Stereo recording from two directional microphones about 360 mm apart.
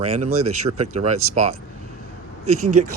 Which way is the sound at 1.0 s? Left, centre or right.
Right.